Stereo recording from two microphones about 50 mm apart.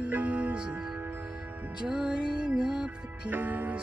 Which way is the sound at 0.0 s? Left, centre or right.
Right.